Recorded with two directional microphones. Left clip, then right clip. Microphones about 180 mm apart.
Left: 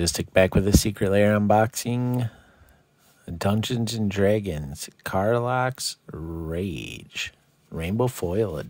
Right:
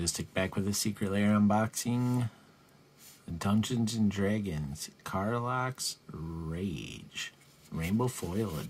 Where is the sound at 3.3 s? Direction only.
50° left (ahead or behind).